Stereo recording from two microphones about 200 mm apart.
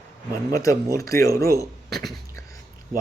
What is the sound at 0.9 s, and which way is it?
Speech, 15° left (ahead or behind).